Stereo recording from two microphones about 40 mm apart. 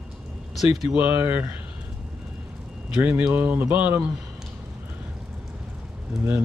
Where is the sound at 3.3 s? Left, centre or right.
Right.